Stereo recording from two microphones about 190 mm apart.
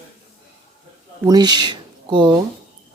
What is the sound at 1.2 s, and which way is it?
Speech, 20° right (ahead or behind).